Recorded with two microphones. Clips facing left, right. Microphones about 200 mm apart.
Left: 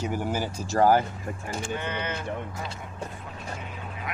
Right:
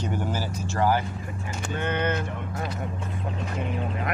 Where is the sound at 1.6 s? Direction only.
55° right (ahead or behind).